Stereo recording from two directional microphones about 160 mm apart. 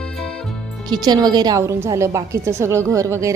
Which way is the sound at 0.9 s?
25° right (ahead or behind).